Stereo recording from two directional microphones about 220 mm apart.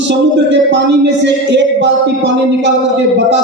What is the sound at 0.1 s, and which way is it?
Speech, 55° right (ahead or behind).